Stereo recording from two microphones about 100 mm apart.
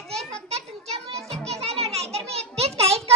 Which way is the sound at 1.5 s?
90° right.